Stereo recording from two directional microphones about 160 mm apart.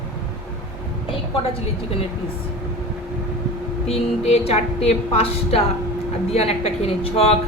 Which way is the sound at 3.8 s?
40° left (ahead or behind).